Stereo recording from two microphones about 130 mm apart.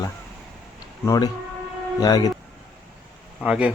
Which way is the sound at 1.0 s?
25° left (ahead or behind).